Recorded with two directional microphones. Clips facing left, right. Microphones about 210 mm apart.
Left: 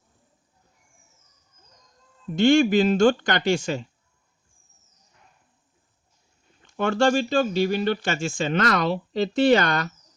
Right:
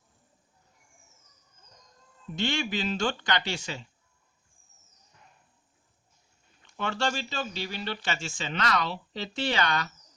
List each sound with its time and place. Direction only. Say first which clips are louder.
2.3 s speech: left 13 dB; 50° left (ahead or behind)
6.7 s speech: left 10 dB; 50° left (ahead or behind)